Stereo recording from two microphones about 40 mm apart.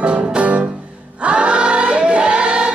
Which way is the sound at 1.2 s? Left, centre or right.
Right.